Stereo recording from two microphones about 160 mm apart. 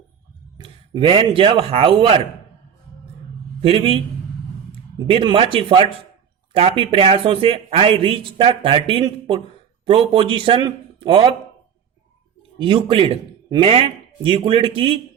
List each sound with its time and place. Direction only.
0.6 s a man's voice: 30° right (ahead or behind)
3.6 s speech: 35° right (ahead or behind)
5.0 s speech: 35° right (ahead or behind)
12.5 s speech: 30° right (ahead or behind)